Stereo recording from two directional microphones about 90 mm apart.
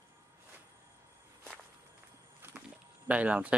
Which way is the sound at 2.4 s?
25° right (ahead or behind).